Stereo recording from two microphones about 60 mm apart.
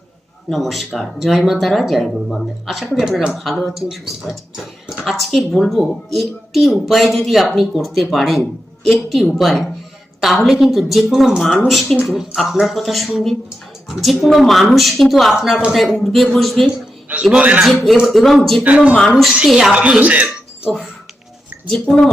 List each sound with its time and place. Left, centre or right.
0.5 s speech: centre
3.0 s speech: centre
5.0 s speech: centre
17.3 s speech: right
17.7 s speech: centre
18.6 s speech: right
19.5 s speech: centre
19.7 s speech: right
21.7 s a woman's voice: centre